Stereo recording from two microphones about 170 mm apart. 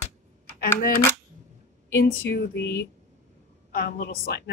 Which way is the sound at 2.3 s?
85° left.